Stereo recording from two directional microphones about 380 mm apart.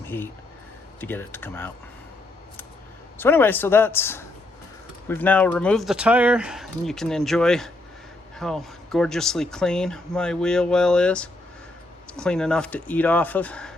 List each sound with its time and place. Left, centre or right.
0.0 s a sound: centre
1.0 s speech: centre
3.2 s speech: centre